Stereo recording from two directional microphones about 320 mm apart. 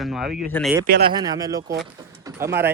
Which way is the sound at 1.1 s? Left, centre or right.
Centre.